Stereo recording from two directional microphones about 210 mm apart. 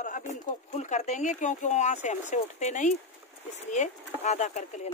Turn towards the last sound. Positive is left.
turn(degrees=35)  # may be behind; listen again after turning